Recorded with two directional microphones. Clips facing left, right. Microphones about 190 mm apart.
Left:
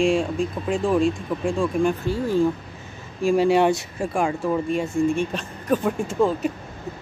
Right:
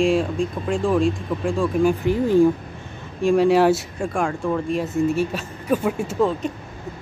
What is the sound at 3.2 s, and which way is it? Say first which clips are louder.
Speech: right 2 dB; centre (ahead or behind).